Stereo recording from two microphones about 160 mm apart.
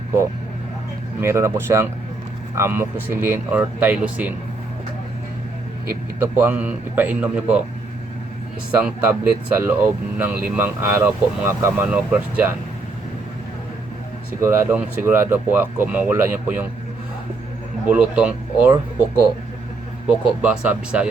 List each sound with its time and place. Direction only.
1.2 s speech: 15° right (ahead or behind)
5.9 s speech: 15° right (ahead or behind)
9.6 s speech: 15° right (ahead or behind)
14.4 s speech: 10° right (ahead or behind)
17.8 s speech: 10° right (ahead or behind)